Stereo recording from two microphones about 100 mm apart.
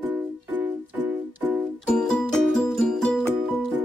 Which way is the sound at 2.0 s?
5° left (ahead or behind).